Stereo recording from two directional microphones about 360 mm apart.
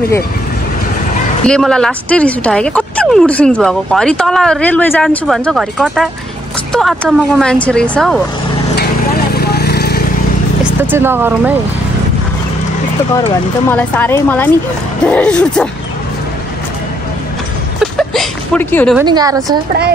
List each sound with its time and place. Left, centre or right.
1.4 s speech: centre
8.7 s a sound: left
10.6 s speech: centre
13.7 s speech: centre
17.7 s a sound: centre
19.0 s a woman's voice: centre